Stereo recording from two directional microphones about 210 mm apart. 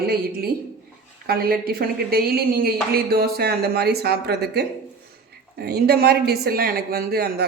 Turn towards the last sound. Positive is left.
turn(degrees=-45)  # may be behind; listen again after turning